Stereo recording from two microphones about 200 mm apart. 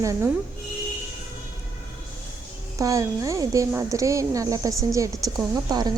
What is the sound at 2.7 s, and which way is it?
Speech, 15° right (ahead or behind).